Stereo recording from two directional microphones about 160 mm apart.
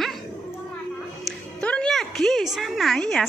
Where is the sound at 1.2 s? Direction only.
5° left (ahead or behind).